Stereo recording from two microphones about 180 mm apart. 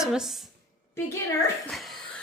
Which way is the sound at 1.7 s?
Centre (ahead or behind).